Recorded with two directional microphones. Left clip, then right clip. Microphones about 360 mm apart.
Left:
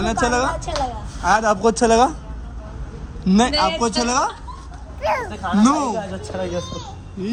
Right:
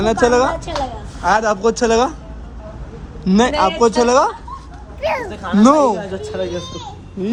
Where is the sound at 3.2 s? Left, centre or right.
Centre.